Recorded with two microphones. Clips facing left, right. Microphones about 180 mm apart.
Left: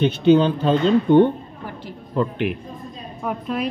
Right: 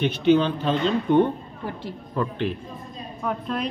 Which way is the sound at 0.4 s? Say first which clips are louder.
Left 5 dB; 35° left (ahead or behind).